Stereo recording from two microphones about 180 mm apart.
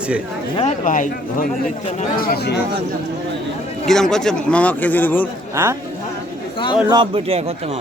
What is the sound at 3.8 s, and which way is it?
A man's voice, 5° left (ahead or behind).